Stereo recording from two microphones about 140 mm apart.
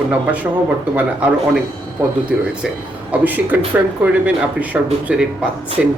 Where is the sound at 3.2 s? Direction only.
10° right (ahead or behind).